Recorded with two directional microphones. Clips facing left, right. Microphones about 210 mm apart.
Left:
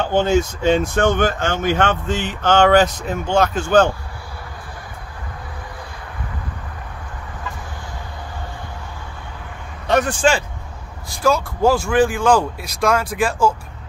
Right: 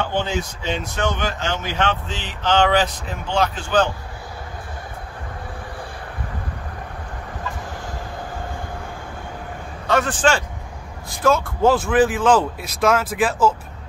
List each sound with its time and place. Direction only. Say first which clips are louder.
0.1 s speech: left 7 dB; 45° left (ahead or behind)
9.8 s speech: left 2 dB; 15° left (ahead or behind)
11.2 s speech: even; centre (ahead or behind)